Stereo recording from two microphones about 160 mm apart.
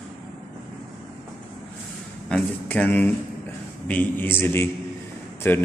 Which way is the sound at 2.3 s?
10° left (ahead or behind).